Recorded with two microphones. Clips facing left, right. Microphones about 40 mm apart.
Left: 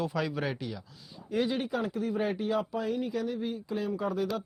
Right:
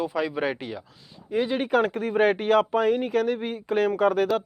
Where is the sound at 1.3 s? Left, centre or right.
Centre.